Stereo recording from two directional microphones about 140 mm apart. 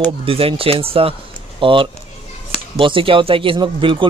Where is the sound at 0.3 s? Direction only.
40° right (ahead or behind).